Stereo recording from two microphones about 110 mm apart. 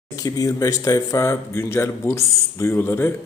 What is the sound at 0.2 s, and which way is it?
Speech, 35° left (ahead or behind).